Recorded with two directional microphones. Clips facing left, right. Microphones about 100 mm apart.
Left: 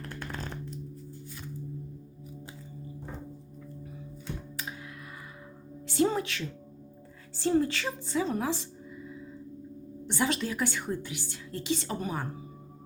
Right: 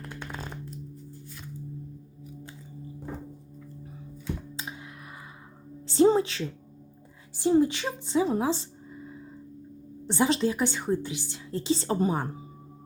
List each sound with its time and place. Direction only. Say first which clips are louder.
0.1 s a sound: even; 5° right (ahead or behind)
4.5 s computer keyboard: right 1 dB; 20° right (ahead or behind)
5.9 s a woman's voice: right 6 dB; 30° right (ahead or behind)
7.3 s a woman's voice: right 4 dB; 15° right (ahead or behind)